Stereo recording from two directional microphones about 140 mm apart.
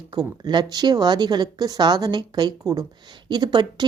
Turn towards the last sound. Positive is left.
turn(degrees=-30)  # may be behind; listen again after turning